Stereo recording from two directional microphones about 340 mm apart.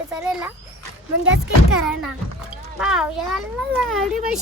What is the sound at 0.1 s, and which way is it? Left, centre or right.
Speech, centre.